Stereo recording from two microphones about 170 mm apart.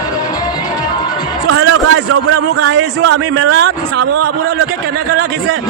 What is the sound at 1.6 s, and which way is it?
A man's voice, 90° right.